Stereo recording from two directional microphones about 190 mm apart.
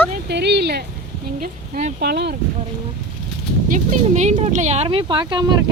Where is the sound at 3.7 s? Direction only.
40° right (ahead or behind).